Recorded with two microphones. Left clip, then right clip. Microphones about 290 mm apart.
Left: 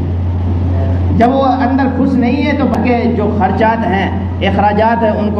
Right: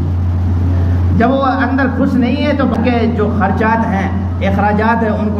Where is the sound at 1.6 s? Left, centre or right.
Right.